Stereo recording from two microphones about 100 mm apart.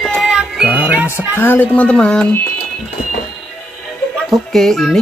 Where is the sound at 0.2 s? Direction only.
5° right (ahead or behind).